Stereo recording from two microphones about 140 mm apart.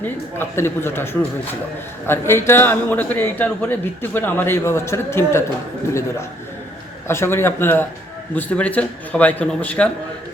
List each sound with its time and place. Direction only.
0.0 s a man's voice: 15° left (ahead or behind)